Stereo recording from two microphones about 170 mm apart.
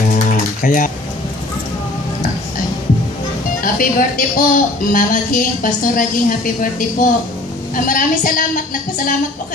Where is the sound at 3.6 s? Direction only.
55° left (ahead or behind).